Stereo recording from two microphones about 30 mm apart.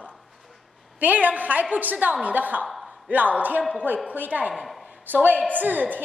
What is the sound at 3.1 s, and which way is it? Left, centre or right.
A woman's voice, right.